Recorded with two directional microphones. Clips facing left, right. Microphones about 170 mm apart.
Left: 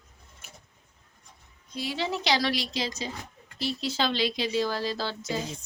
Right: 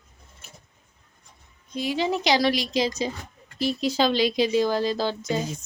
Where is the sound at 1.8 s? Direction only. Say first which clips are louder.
Right 6 dB; 15° right (ahead or behind).